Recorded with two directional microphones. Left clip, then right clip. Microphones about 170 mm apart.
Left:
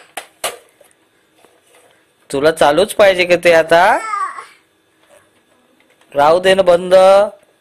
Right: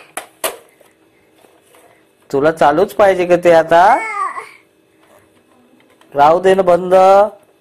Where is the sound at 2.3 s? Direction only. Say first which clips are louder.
Even; 40° left (ahead or behind).